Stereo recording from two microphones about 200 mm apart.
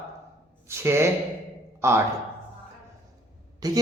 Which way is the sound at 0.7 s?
10° right (ahead or behind).